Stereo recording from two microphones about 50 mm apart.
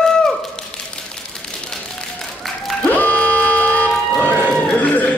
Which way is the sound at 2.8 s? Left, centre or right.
Left.